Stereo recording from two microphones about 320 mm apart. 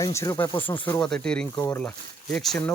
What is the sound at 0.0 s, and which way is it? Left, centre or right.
Speech, centre.